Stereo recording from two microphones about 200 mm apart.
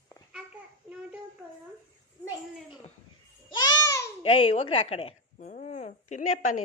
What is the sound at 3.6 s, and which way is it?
Babbling, 20° left (ahead or behind).